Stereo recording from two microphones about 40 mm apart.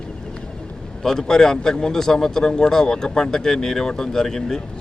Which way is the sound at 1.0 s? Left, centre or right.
Centre.